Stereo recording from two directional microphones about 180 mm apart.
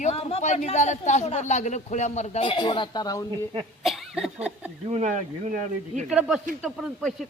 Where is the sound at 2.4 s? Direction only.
25° left (ahead or behind).